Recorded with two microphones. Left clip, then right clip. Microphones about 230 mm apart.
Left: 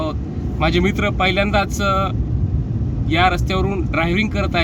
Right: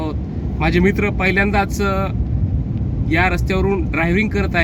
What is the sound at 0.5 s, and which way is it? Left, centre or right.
Speech, centre.